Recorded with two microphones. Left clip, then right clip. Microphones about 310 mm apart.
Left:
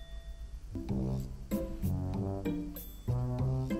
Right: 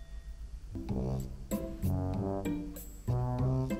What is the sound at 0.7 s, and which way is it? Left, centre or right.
Music, centre.